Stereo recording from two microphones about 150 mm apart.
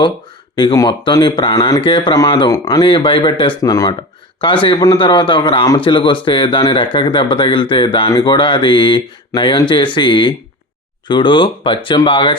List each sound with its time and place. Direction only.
0.5 s a man's voice: 25° left (ahead or behind)
3.6 s a man's voice: 25° left (ahead or behind)